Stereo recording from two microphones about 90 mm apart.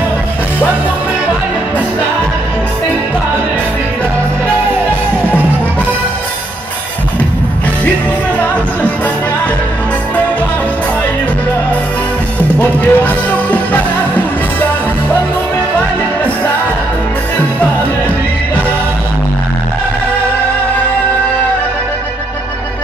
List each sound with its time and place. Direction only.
12.5 s music: 15° left (ahead or behind)